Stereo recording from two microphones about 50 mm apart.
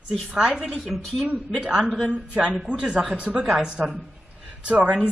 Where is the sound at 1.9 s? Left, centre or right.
Left.